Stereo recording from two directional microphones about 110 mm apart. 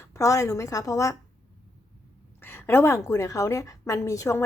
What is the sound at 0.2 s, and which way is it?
Speech, 30° left (ahead or behind).